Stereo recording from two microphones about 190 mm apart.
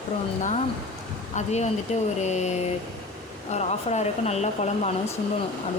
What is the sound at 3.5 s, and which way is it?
Speech, 35° left (ahead or behind).